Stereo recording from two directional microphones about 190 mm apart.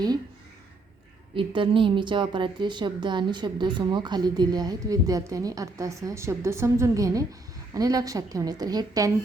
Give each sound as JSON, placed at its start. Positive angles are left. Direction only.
{"t": 1.4, "sound": "a woman's voice", "side_deg": -25}